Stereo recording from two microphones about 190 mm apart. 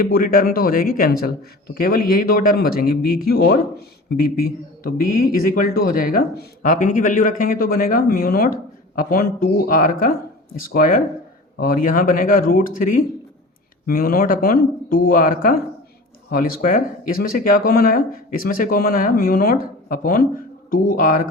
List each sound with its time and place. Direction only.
0.0 s speech: 50° left (ahead or behind)